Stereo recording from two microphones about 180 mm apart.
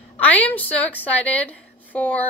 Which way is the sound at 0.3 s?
10° left (ahead or behind).